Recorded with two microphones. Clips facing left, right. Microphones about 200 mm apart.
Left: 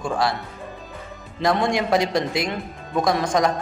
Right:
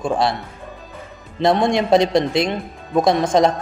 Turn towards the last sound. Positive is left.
turn(degrees=-25)  # may be behind; listen again after turning